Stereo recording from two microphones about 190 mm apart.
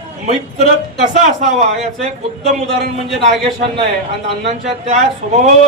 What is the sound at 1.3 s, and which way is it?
Speech, 35° right (ahead or behind).